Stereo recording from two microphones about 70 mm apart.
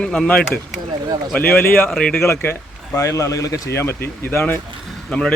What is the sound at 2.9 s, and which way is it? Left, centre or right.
Speech, left.